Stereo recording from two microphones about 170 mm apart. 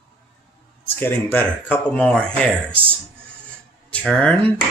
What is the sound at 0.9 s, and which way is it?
Speech, 10° left (ahead or behind).